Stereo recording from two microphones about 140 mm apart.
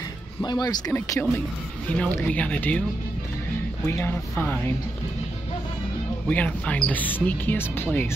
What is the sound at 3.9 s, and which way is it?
Speech, 15° left (ahead or behind).